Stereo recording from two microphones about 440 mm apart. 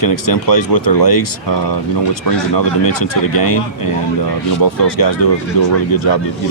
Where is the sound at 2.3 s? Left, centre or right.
Left.